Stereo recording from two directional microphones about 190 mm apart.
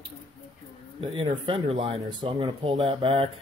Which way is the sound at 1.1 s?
30° right (ahead or behind).